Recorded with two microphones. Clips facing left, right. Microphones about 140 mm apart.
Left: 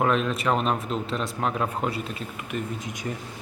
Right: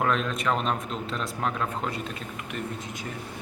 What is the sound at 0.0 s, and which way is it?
Speech, 5° left (ahead or behind).